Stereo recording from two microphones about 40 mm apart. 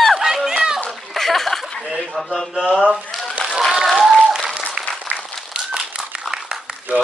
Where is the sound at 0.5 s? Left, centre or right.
Centre.